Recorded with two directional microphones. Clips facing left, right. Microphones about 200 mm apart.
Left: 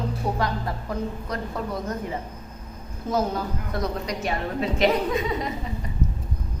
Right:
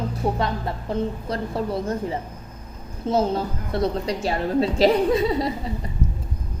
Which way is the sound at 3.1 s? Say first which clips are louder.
Right 3 dB; 25° right (ahead or behind).